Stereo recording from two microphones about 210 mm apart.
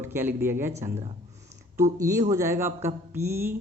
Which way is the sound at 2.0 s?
15° right (ahead or behind).